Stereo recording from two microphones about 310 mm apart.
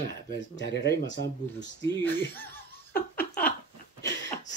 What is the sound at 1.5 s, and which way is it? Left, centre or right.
Laughter, centre.